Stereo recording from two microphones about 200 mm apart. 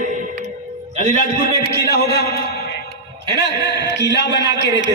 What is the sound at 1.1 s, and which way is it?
A man's voice, 50° left (ahead or behind).